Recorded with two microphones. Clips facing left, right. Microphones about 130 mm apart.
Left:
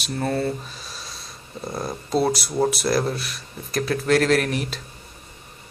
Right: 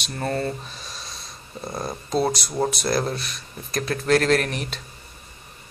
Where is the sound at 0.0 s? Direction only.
5° left (ahead or behind).